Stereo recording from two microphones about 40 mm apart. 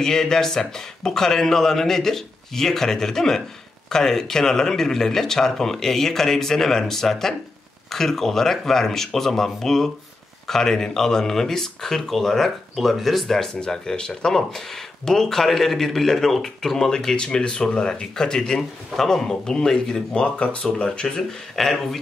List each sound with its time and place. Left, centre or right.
0.0 s speech: centre
12.4 s speech: centre
13.6 s speech: centre
20.2 s speech: left
21.3 s speech: centre